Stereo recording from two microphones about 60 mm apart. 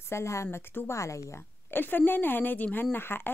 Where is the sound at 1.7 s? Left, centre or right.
Left.